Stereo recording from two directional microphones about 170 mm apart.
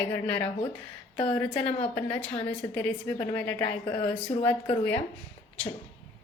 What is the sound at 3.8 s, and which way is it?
Speech, 30° left (ahead or behind).